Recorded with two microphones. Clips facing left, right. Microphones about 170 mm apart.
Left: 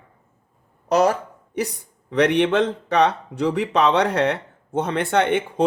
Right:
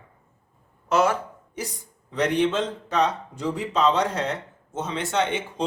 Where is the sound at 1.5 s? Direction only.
65° left (ahead or behind).